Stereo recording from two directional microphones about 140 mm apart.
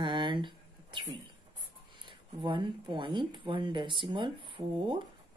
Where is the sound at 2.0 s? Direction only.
35° right (ahead or behind).